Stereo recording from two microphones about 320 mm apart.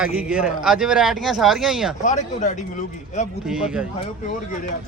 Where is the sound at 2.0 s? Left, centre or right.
Left.